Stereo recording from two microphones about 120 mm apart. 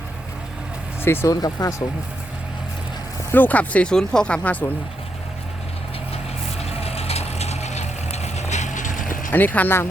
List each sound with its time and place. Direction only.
1.0 s speech: 20° left (ahead or behind)
3.3 s speech: 15° left (ahead or behind)
6.6 s vehicle: 60° left (ahead or behind); by 9.3 s 90° left
9.3 s speech: 15° left (ahead or behind)